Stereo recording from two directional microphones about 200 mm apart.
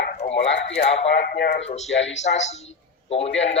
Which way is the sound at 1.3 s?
50° left (ahead or behind).